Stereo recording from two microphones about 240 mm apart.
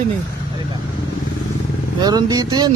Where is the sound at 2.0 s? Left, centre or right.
Centre.